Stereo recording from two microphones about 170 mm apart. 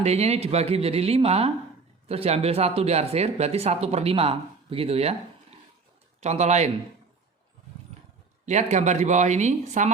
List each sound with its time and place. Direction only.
0.0 s speech: 40° right (ahead or behind)
6.1 s speech: 40° right (ahead or behind)
8.4 s speech: 40° right (ahead or behind)